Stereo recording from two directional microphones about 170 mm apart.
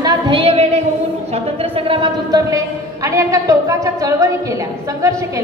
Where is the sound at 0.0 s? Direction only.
30° right (ahead or behind).